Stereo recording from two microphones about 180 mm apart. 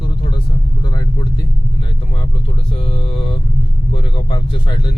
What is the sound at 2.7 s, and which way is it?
Mantra, 30° left (ahead or behind).